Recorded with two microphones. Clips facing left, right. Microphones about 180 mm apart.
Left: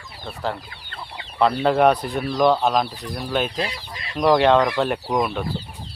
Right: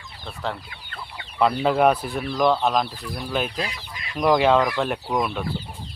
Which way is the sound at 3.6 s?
30° left (ahead or behind).